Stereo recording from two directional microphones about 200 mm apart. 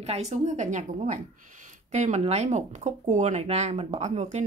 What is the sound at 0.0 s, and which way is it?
A woman's voice, 35° right (ahead or behind).